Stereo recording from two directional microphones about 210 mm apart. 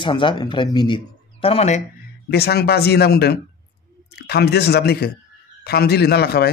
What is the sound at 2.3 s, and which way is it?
Speech, 50° left (ahead or behind).